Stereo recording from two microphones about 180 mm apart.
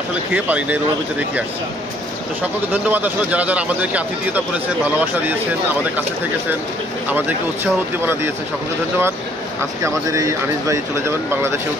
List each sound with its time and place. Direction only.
0.3 s speech: 10° right (ahead or behind)
2.4 s speech: 10° right (ahead or behind)
7.1 s speech: 10° right (ahead or behind)
9.8 s speech: 15° right (ahead or behind)